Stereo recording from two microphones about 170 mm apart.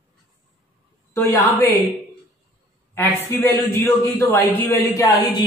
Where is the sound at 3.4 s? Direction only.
15° left (ahead or behind).